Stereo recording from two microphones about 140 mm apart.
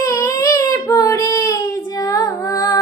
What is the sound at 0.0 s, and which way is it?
Child singing, 25° left (ahead or behind).